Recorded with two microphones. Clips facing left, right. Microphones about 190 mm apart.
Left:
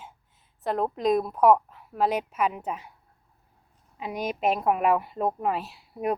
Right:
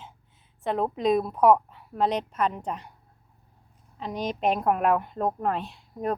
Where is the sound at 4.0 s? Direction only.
10° left (ahead or behind).